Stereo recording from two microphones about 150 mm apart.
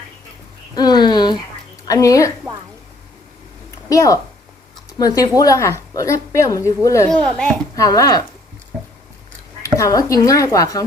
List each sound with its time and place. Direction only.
0.8 s a sound: 30° left (ahead or behind)
1.9 s a woman's voice: 20° left (ahead or behind)
3.8 s a woman's voice: 20° left (ahead or behind)
7.3 s a child's voice: 5° left (ahead or behind)
7.8 s a woman's voice: 25° left (ahead or behind)
9.6 s a woman's voice: 20° left (ahead or behind)